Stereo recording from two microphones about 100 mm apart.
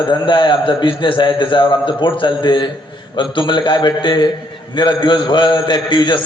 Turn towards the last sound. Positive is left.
turn(degrees=50)  # may be behind; listen again after turning